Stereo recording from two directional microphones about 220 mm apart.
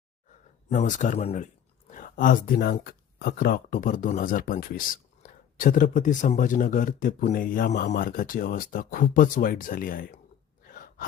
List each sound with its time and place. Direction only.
0.3 s speech: 35° left (ahead or behind)
10.7 s gasp: 40° left (ahead or behind)